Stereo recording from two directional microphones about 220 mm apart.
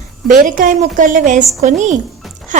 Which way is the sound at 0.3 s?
35° right (ahead or behind).